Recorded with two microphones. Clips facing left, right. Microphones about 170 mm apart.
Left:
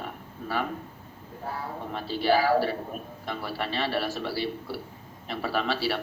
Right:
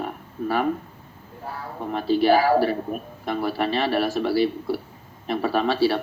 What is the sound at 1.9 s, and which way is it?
A man's voice, 50° right (ahead or behind).